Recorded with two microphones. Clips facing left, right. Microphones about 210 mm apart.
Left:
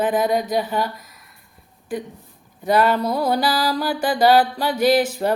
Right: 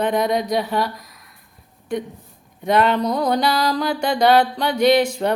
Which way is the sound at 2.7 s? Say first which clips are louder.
Even; 5° left (ahead or behind).